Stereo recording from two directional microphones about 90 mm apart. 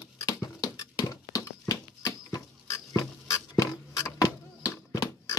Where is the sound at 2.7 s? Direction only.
35° left (ahead or behind).